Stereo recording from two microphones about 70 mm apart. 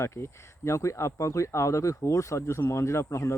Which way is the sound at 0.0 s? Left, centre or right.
Left.